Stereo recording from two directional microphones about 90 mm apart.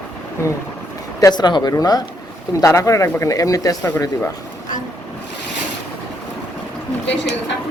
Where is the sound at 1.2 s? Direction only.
50° left (ahead or behind).